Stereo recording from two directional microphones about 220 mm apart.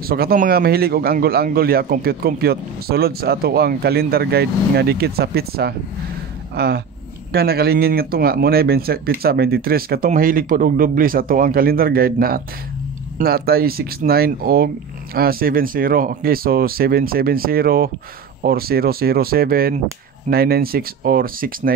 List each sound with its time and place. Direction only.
0.0 s a man's voice: 45° right (ahead or behind)